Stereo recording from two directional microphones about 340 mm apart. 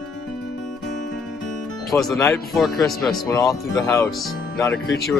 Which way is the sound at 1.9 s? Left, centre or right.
Centre.